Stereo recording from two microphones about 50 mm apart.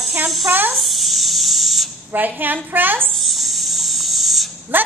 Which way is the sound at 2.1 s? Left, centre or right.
Right.